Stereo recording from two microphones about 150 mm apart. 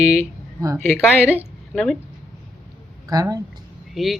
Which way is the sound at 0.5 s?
20° right (ahead or behind).